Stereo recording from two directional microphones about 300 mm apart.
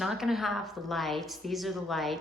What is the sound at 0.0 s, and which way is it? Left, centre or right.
A woman's voice, centre.